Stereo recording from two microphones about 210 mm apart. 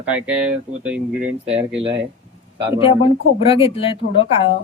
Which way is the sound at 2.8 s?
25° left (ahead or behind).